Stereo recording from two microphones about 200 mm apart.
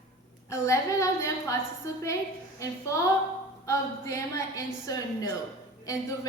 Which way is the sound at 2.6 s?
15° left (ahead or behind).